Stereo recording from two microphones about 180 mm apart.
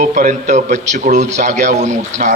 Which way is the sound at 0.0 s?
45° right (ahead or behind).